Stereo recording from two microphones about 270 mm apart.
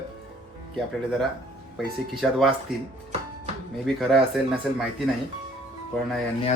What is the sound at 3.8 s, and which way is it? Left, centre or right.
Speech, centre.